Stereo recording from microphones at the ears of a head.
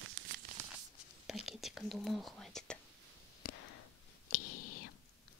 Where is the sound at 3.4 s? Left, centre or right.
Left.